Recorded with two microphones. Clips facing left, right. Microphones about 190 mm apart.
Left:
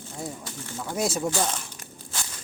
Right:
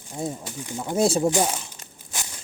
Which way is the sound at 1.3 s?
15° right (ahead or behind).